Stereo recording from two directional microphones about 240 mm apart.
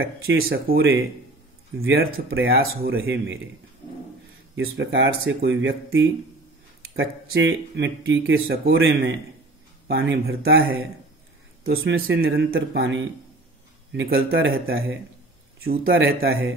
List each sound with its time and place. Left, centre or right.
0.0 s speech: right
0.5 s speech: right
1.8 s speech: right
4.6 s speech: right
14.3 s speech: right
15.6 s speech: right
15.9 s speech: right